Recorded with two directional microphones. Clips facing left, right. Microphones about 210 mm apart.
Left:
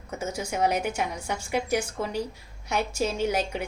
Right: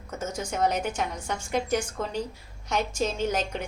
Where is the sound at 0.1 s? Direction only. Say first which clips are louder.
Left 1 dB; 10° left (ahead or behind).